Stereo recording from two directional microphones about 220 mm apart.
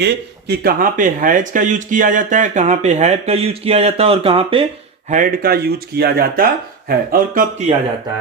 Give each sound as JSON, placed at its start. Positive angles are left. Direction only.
{"t": 0.0, "sound": "speech", "side_deg": -50}
{"t": 5.1, "sound": "speech", "side_deg": -40}